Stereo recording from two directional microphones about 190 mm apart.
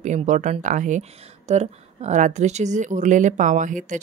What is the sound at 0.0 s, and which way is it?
A woman's voice, 40° right (ahead or behind).